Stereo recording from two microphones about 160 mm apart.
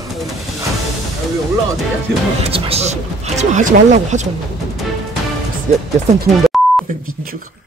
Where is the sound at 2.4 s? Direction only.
35° right (ahead or behind).